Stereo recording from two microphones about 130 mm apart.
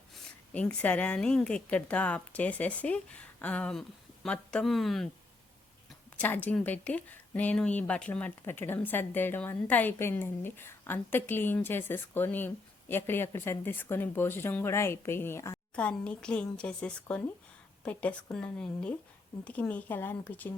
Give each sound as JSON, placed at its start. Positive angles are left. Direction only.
{"t": 0.1, "sound": "speech", "side_deg": 10}
{"t": 6.1, "sound": "speech", "side_deg": 15}
{"t": 15.7, "sound": "speech", "side_deg": 10}